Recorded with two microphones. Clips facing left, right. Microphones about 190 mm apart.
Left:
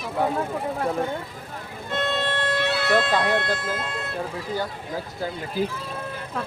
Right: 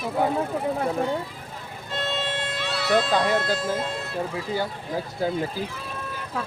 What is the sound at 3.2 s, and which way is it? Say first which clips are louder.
Speech: right 1 dB; 60° left (ahead or behind).